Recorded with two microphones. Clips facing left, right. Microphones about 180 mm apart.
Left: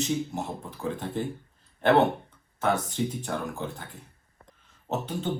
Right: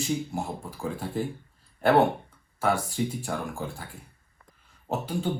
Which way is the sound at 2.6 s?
10° right (ahead or behind).